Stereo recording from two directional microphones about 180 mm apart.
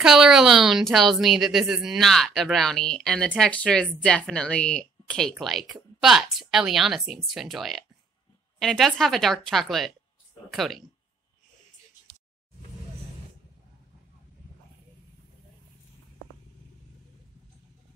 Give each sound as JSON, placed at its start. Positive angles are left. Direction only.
{"t": 0.0, "sound": "a woman's voice", "side_deg": 0}